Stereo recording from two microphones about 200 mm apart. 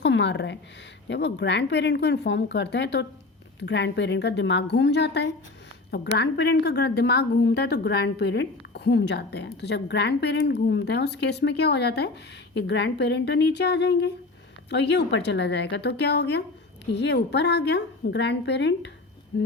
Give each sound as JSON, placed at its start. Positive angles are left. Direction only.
{"t": 0.0, "sound": "a woman's voice", "side_deg": 60}